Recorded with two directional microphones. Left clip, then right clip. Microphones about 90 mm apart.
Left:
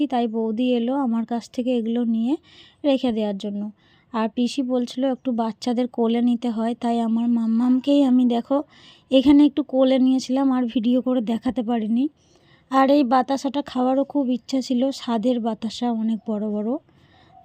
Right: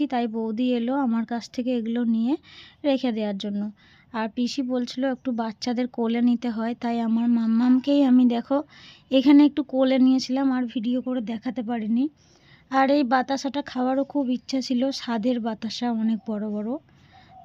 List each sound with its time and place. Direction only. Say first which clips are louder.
0.0 s speech: left 3 dB; 30° left (ahead or behind)
4.1 s speech: left 4 dB; 40° left (ahead or behind)
7.1 s speech: left 1 dB; 5° left (ahead or behind)
7.8 s speech: left 3 dB; 30° left (ahead or behind)
10.5 s speech: left 5 dB; 60° left (ahead or behind)
11.6 s speech: even; 45° left (ahead or behind); by 16.7 s 30° left (ahead or behind)